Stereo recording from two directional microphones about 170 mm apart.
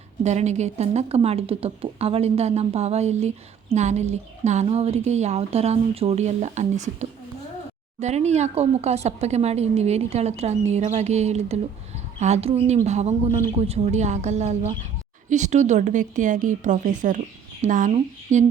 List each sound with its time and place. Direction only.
0.2 s speech: 40° right (ahead or behind)